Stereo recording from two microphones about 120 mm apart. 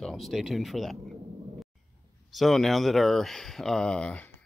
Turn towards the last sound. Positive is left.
turn(degrees=10)  # may be behind; listen again after turning